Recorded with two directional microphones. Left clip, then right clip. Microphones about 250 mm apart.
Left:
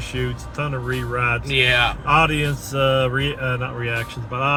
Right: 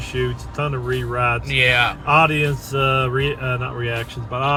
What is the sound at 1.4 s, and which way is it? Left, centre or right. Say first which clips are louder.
Speech: even; centre.